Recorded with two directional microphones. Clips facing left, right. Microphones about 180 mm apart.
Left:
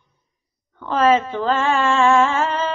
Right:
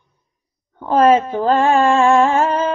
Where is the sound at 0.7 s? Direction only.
45° right (ahead or behind).